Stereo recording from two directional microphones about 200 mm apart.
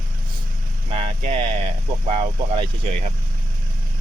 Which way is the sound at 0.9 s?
30° right (ahead or behind).